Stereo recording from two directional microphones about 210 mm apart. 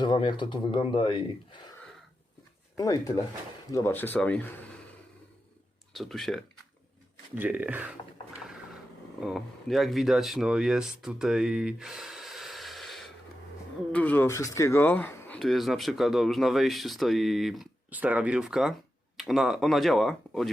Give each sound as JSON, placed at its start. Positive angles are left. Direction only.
{"t": 0.0, "sound": "speech", "side_deg": 25}
{"t": 2.7, "sound": "speech", "side_deg": 15}
{"t": 5.9, "sound": "speech", "side_deg": 0}
{"t": 9.2, "sound": "speech", "side_deg": 0}